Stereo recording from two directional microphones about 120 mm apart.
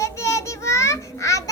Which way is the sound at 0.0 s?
25° left (ahead or behind).